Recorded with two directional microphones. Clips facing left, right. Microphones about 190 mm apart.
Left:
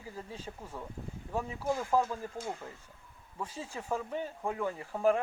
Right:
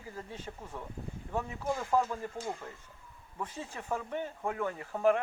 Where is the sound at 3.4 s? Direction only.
10° left (ahead or behind).